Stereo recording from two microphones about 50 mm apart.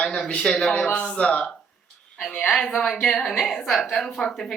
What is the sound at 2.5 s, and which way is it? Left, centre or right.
A woman's voice, centre.